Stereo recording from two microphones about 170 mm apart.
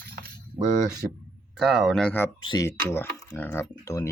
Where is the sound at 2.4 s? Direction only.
25° left (ahead or behind).